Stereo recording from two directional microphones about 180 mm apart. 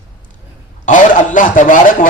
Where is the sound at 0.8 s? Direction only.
45° left (ahead or behind).